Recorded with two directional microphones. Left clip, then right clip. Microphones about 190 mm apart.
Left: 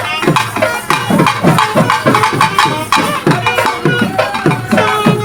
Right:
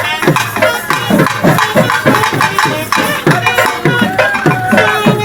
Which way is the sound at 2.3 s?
25° right (ahead or behind).